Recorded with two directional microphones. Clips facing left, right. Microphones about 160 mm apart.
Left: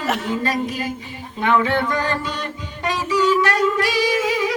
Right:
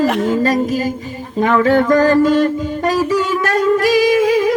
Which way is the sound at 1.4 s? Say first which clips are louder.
Right 6 dB; 40° right (ahead or behind).